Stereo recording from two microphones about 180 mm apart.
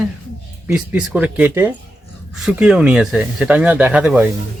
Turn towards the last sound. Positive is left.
turn(degrees=-10)  # may be behind; listen again after turning